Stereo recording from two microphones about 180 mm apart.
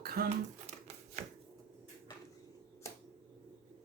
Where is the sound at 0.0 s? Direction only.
55° right (ahead or behind).